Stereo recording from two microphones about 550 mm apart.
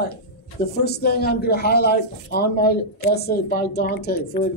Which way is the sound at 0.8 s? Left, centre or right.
Centre.